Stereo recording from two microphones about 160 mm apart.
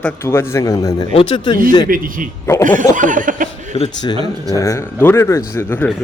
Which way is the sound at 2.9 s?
55° right (ahead or behind).